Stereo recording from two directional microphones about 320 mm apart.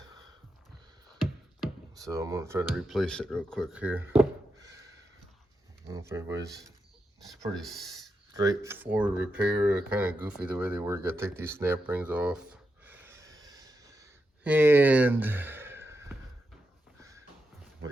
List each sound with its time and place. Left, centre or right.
2.0 s speech: centre
5.9 s speech: centre
7.6 s speech: centre
8.3 s speech: centre